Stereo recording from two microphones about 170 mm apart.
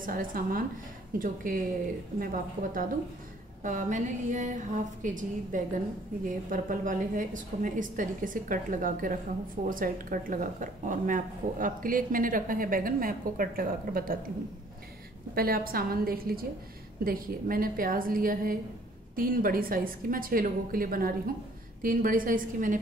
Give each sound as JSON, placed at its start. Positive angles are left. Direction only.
{"t": 0.0, "sound": "a woman's voice", "side_deg": -55}
{"t": 15.3, "sound": "a woman's voice", "side_deg": -60}